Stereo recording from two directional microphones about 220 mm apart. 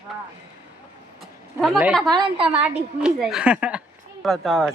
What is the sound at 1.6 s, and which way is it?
Speech, 5° right (ahead or behind).